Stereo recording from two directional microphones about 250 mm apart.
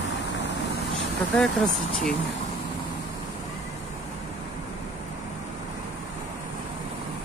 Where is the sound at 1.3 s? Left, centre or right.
Centre.